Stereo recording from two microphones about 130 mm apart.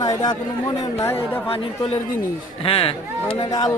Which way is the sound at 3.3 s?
30° left (ahead or behind).